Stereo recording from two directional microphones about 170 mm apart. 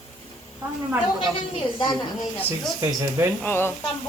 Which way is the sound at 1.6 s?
30° left (ahead or behind).